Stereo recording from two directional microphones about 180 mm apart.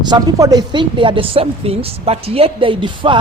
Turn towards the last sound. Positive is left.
turn(degrees=-25)  # may be behind; listen again after turning